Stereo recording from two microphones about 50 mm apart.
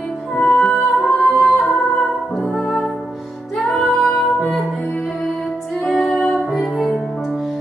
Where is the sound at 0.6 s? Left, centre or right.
Centre.